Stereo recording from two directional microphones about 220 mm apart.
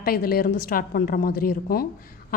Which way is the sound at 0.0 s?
45° left (ahead or behind).